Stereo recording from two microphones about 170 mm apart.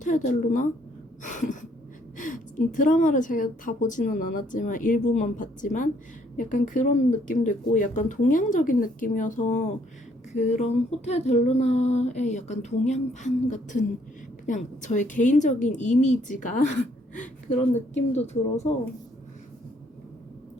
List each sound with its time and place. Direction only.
0.0 s a woman's voice: 50° left (ahead or behind)
1.2 s gasp: 50° left (ahead or behind)
2.1 s a woman's voice: 50° left (ahead or behind)
10.3 s female singing: 45° left (ahead or behind)
14.4 s a woman's voice: 45° left (ahead or behind)
17.7 s female singing: 40° left (ahead or behind)